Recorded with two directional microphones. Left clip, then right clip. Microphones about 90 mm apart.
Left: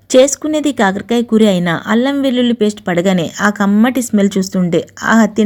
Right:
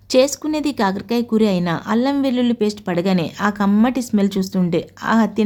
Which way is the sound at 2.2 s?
25° left (ahead or behind).